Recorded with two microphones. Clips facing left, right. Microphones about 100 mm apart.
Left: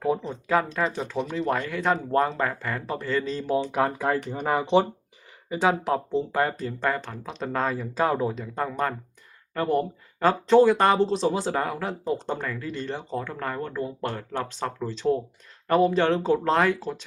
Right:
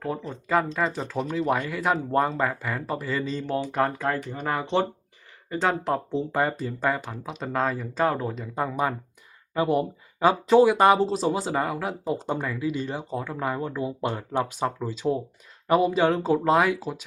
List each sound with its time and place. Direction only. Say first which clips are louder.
0.4 s speech: even; centre (ahead or behind)
8.4 s speech: right 1 dB; 5° right (ahead or behind)